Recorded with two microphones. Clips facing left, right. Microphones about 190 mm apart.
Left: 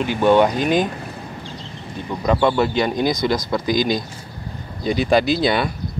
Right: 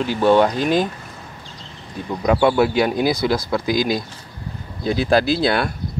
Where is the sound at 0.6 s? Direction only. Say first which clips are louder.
Even; 55° left (ahead or behind).